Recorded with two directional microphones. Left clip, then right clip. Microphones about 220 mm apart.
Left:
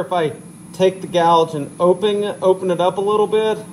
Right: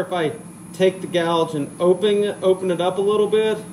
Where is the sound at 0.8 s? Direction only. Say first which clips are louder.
Left 4 dB; 25° left (ahead or behind).